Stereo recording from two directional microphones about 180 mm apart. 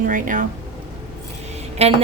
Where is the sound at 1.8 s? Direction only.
35° right (ahead or behind).